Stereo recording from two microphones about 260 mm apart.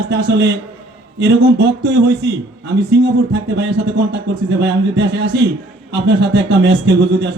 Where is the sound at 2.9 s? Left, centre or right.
Right.